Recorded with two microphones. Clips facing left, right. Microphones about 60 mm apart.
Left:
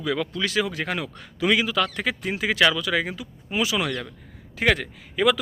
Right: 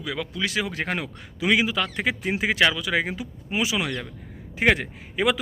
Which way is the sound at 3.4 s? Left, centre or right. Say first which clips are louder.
Left 1 dB; centre.